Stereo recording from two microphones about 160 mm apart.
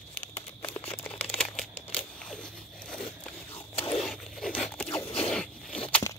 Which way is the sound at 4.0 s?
Centre (ahead or behind).